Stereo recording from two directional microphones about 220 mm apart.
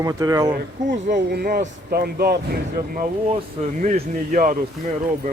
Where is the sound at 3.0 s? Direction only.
30° right (ahead or behind).